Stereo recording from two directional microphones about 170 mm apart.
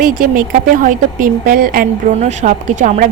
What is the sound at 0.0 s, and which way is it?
Speech, 55° right (ahead or behind).